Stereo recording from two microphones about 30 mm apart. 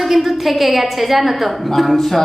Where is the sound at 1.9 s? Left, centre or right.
Centre.